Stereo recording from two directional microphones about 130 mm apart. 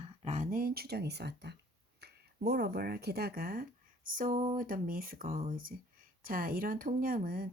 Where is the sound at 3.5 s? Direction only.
90° right.